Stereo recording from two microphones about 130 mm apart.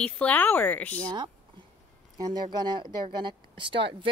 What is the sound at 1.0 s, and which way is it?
Speech, 35° right (ahead or behind).